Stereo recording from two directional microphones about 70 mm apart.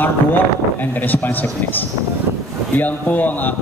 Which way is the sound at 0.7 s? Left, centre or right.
Left.